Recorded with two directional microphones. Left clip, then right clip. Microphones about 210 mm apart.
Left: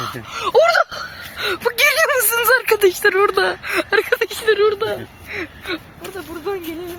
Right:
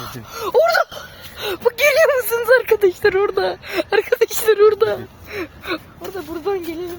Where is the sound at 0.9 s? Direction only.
15° right (ahead or behind).